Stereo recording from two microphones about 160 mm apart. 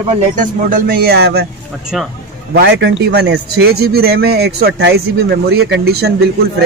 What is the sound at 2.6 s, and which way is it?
A man's voice, 90° right.